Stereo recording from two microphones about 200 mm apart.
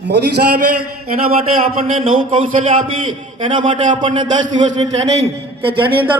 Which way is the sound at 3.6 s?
40° right (ahead or behind).